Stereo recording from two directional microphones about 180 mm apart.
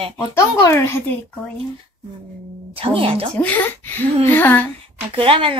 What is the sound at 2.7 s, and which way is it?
Speech, 30° right (ahead or behind).